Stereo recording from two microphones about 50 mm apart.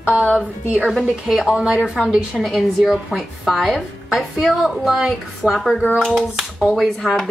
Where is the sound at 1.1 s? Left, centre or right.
Centre.